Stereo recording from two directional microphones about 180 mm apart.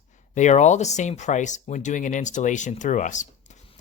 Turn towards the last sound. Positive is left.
turn(degrees=45)  # may be behind; listen again after turning